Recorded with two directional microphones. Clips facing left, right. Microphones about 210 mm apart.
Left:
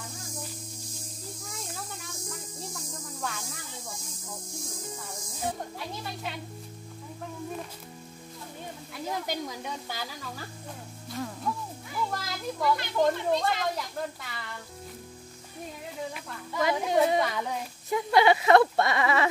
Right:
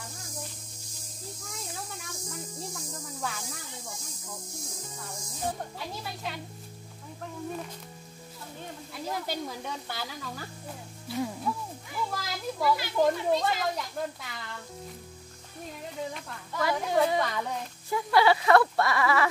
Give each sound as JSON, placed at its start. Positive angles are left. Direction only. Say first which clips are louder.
{"t": 1.5, "sound": "snake", "louder": "right 1 dB", "side_deg": 0}
{"t": 5.4, "sound": "speech", "louder": "even", "side_deg": 0}
{"t": 9.1, "sound": "speech", "louder": "left 1 dB", "side_deg": 15}
{"t": 10.0, "sound": "speech", "louder": "right 1 dB", "side_deg": 0}
{"t": 16.5, "sound": "speech", "louder": "left 1 dB", "side_deg": 20}
{"t": 17.2, "sound": "speech", "louder": "left 1 dB", "side_deg": 5}
{"t": 17.8, "sound": "speech", "louder": "left 1 dB", "side_deg": 20}